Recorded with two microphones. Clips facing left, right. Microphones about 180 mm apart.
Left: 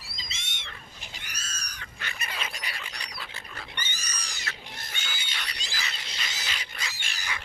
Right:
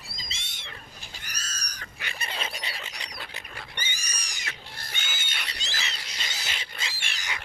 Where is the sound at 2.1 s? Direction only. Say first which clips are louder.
Right 2 dB; 30° right (ahead or behind).